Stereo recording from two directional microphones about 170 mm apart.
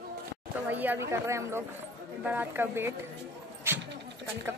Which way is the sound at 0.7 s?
10° right (ahead or behind).